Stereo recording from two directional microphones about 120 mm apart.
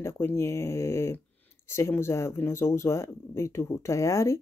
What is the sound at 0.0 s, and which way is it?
Speech, 20° left (ahead or behind).